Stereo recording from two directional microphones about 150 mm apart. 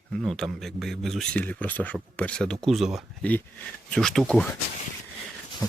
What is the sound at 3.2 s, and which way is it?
A man's voice, 10° left (ahead or behind).